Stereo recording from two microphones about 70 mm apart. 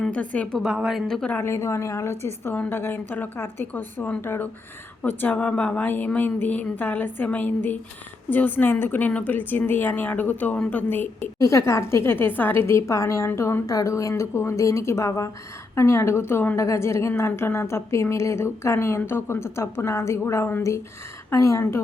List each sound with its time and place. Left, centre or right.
0.1 s a woman's voice: centre
0.6 s a woman's voice: centre
1.0 s a woman's voice: centre
1.4 s a woman's voice: left
5.0 s a woman's voice: left
11.3 s a woman's voice: left
13.7 s a woman's voice: left
16.6 s a woman's voice: left